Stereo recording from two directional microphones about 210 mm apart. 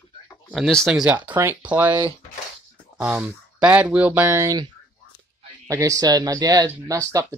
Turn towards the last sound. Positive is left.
turn(degrees=-15)  # may be behind; listen again after turning